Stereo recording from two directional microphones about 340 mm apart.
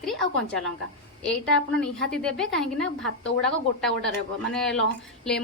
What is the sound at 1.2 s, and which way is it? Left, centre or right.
A woman's voice, centre.